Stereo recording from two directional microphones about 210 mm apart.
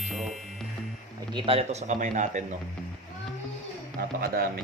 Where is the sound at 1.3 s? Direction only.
25° right (ahead or behind).